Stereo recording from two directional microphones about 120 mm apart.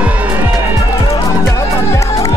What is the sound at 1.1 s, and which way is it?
Music, 25° left (ahead or behind).